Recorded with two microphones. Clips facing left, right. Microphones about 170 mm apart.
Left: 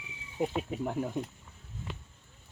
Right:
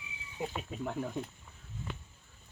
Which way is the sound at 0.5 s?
15° left (ahead or behind).